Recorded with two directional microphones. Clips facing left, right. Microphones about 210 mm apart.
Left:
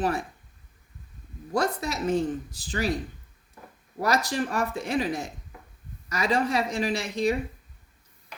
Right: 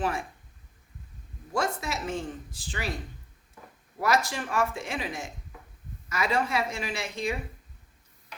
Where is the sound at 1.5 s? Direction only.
40° left (ahead or behind).